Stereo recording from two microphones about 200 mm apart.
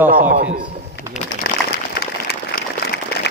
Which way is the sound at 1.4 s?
50° left (ahead or behind).